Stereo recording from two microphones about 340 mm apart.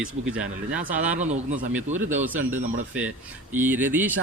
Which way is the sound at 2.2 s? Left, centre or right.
Centre.